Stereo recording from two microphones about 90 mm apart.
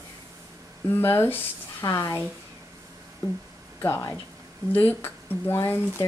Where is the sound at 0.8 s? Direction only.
25° left (ahead or behind).